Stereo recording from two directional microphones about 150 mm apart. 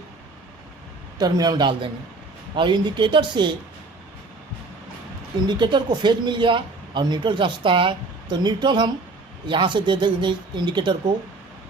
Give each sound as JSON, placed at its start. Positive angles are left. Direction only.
{"t": 1.2, "sound": "a man's voice", "side_deg": -25}
{"t": 5.5, "sound": "speech", "side_deg": -30}